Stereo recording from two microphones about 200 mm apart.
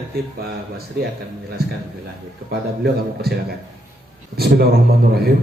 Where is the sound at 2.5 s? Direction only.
50° right (ahead or behind).